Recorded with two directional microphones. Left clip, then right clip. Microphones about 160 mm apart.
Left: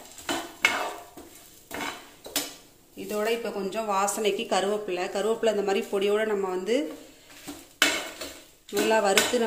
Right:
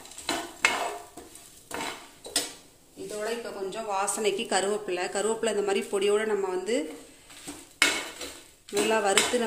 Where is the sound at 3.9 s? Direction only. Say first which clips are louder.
Left 3 dB; 20° left (ahead or behind).